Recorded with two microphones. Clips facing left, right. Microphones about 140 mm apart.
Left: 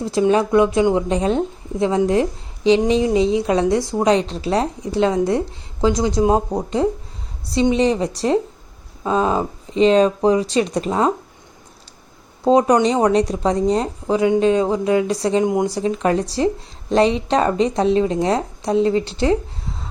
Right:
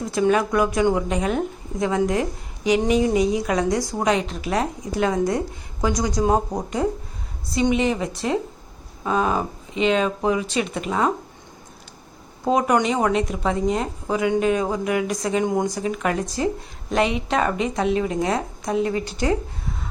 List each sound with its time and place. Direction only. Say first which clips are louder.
0.0 s a woman's voice: left 3 dB; 30° left (ahead or behind)
7.5 s speech: left 4 dB; 30° left (ahead or behind)
12.5 s a woman's voice: left 5 dB; 30° left (ahead or behind)